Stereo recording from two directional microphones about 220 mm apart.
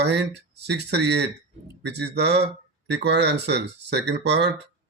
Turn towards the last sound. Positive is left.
turn(degrees=-50)  # may be behind; listen again after turning